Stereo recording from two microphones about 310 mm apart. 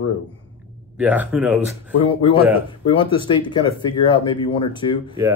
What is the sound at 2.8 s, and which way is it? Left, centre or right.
Speech, centre.